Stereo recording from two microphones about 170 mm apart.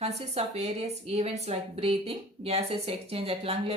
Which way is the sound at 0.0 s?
35° right (ahead or behind).